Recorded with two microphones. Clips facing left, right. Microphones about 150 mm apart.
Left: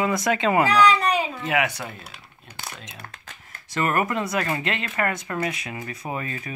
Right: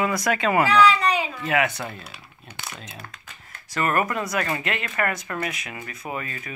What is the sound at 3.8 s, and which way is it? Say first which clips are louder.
Speech: even; 20° left (ahead or behind).